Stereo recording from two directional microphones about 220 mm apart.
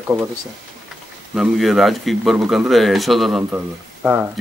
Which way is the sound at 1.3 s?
Centre (ahead or behind).